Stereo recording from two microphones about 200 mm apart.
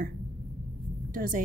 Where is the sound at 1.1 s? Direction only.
45° right (ahead or behind).